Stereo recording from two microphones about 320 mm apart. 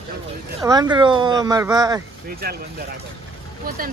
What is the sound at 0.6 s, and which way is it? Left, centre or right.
Speech, centre.